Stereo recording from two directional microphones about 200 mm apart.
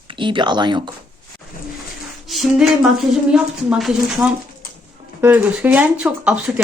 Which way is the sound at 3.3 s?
5° right (ahead or behind).